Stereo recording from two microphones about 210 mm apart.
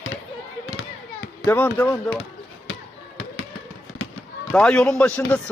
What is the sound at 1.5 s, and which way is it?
Speech, 10° left (ahead or behind).